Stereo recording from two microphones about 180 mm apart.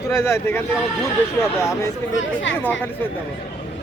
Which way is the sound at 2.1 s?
90° left.